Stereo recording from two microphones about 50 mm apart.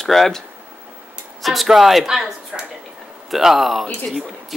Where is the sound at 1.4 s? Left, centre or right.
Centre.